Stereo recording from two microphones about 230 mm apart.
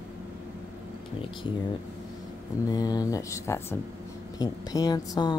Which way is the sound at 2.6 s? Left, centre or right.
Centre.